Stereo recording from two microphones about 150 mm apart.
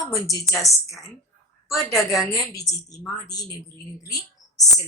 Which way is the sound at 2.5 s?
20° left (ahead or behind).